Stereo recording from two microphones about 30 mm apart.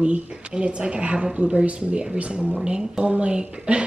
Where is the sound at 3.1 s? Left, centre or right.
Right.